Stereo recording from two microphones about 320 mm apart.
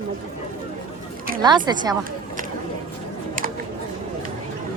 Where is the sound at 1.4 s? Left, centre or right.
Centre.